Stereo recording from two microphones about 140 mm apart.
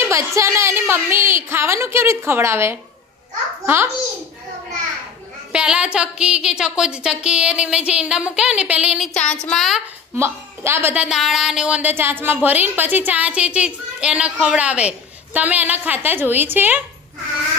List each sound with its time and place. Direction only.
0.0 s a woman's voice: 20° right (ahead or behind)
5.5 s speech: 5° right (ahead or behind)
9.1 s a sound: 5° left (ahead or behind)
10.2 s speech: 20° right (ahead or behind)